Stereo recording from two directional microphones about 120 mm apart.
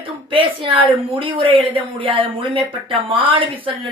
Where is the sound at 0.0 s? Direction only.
45° right (ahead or behind).